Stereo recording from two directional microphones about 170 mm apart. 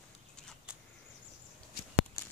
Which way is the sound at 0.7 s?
5° right (ahead or behind).